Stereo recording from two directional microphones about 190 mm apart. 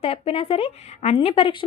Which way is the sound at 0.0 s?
30° left (ahead or behind).